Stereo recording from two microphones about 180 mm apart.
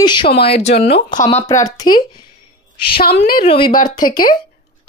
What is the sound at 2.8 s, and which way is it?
Speech, 60° left (ahead or behind).